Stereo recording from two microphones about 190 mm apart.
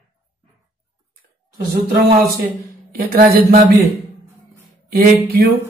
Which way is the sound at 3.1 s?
45° right (ahead or behind).